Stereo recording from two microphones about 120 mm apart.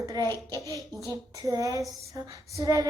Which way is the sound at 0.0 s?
30° right (ahead or behind).